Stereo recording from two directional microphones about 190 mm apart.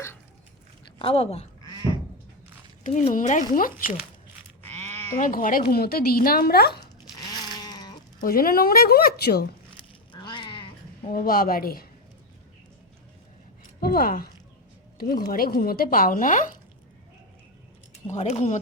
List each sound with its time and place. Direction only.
0.9 s speech: 30° left (ahead or behind)
2.8 s speech: 40° left (ahead or behind)
4.6 s sheep: 10° left (ahead or behind)
5.2 s a woman's voice: 45° left (ahead or behind)
7.3 s a sound: 20° left (ahead or behind)
8.2 s speech: 50° left (ahead or behind)
9.7 s sheep: 25° left (ahead or behind)
11.0 s speech: 45° left (ahead or behind)
13.8 s speech: 50° left (ahead or behind)
18.1 s speech: 35° left (ahead or behind)